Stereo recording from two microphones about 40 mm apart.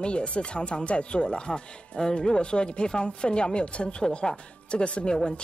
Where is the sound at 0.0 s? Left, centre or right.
Left.